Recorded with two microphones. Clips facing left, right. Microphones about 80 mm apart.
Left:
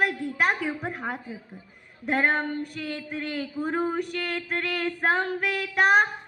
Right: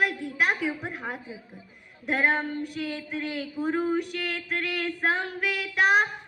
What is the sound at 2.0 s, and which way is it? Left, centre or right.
Female singing, left.